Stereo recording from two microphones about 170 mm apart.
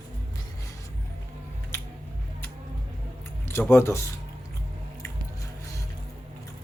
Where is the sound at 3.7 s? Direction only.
15° left (ahead or behind).